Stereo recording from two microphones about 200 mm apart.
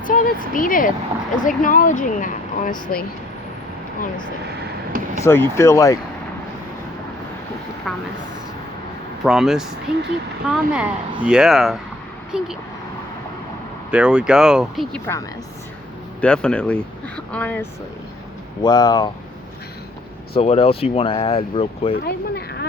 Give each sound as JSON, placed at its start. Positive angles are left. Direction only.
{"t": 0.0, "sound": "speech", "side_deg": 40}
{"t": 4.4, "sound": "vehicle", "side_deg": -45}
{"t": 5.2, "sound": "speech", "side_deg": 10}
{"t": 9.2, "sound": "speech", "side_deg": 0}
{"t": 13.9, "sound": "speech", "side_deg": -5}
{"t": 16.2, "sound": "speech", "side_deg": 5}
{"t": 18.6, "sound": "speech", "side_deg": 20}
{"t": 20.3, "sound": "speech", "side_deg": 30}
{"t": 22.0, "sound": "speech", "side_deg": 55}